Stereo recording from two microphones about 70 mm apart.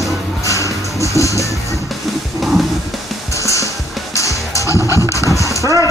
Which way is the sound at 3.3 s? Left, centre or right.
Left.